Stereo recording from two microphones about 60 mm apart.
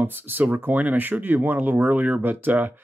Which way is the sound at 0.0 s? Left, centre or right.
Right.